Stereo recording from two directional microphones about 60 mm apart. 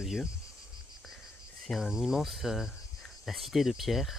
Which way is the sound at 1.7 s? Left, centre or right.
Centre.